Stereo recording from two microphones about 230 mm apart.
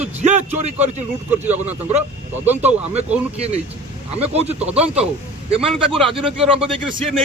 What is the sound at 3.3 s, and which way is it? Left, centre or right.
Speech, right.